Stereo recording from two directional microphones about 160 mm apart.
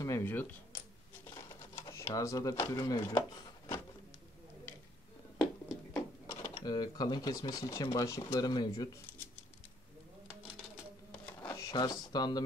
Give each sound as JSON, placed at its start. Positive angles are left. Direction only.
{"t": 0.0, "sound": "speech", "side_deg": 15}
{"t": 1.3, "sound": "computer keyboard", "side_deg": 20}
{"t": 5.9, "sound": "sewing machine", "side_deg": 20}
{"t": 6.6, "sound": "speech", "side_deg": 25}
{"t": 11.3, "sound": "a sound", "side_deg": 20}